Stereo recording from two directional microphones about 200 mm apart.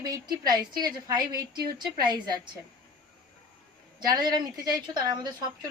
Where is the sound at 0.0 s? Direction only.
20° right (ahead or behind).